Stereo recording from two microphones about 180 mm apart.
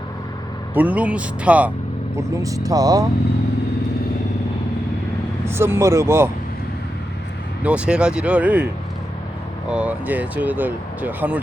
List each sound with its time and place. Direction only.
0.7 s speech: 10° right (ahead or behind)
2.1 s speech: 20° right (ahead or behind)
5.5 s speech: 15° right (ahead or behind)
7.6 s speech: 5° right (ahead or behind)
9.6 s speech: 5° right (ahead or behind)